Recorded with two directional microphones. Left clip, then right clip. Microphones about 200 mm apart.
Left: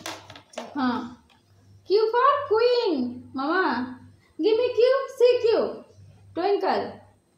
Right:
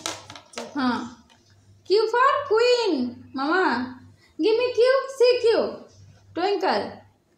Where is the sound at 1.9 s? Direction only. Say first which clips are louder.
Right 1 dB; 25° right (ahead or behind).